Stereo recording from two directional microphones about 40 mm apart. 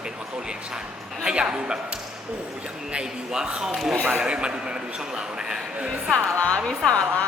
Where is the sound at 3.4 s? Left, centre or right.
Right.